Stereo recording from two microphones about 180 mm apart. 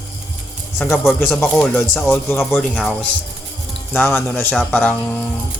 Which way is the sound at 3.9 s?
10° left (ahead or behind).